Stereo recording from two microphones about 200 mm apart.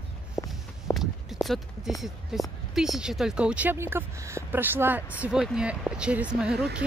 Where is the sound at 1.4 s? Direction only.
Centre (ahead or behind).